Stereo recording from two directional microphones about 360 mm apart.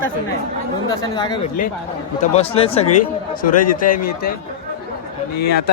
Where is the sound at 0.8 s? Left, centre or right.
Centre.